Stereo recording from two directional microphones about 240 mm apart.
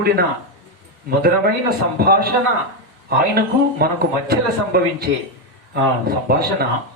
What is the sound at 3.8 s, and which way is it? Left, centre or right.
Speech, right.